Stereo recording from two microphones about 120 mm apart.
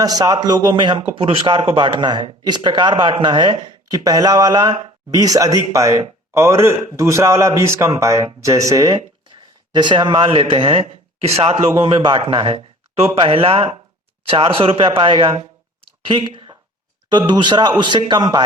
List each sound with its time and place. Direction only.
0.0 s a man's voice: 30° right (ahead or behind); by 11.6 s 55° right (ahead or behind)
11.8 s a man's voice: 40° right (ahead or behind)
16.0 s a sound: 45° right (ahead or behind)
17.1 s speech: 40° right (ahead or behind)